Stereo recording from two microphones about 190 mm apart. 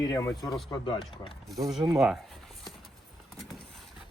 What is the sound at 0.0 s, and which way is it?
Speech, 15° left (ahead or behind).